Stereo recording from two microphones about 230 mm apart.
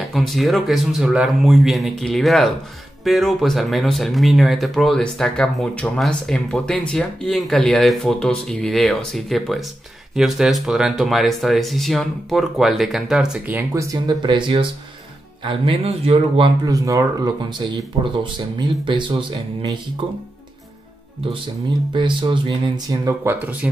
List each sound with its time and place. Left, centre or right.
0.1 s speech: centre
21.9 s speech: right